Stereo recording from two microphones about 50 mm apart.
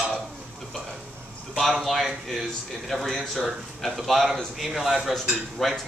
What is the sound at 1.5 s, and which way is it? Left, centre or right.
Speech, centre.